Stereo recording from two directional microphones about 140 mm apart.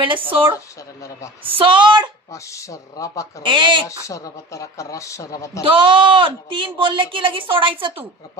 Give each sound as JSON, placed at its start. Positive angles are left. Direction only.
{"t": 0.0, "sound": "speech", "side_deg": -40}
{"t": 1.5, "sound": "speech", "side_deg": -40}
{"t": 2.3, "sound": "speech", "side_deg": 20}
{"t": 3.4, "sound": "speech", "side_deg": -35}
{"t": 3.8, "sound": "speech", "side_deg": 25}
{"t": 5.7, "sound": "speech", "side_deg": -35}